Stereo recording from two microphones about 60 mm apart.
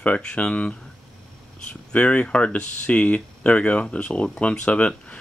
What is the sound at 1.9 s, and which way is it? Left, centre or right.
Speech, centre.